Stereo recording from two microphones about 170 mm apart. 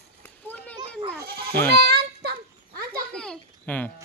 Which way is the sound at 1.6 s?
70° right (ahead or behind).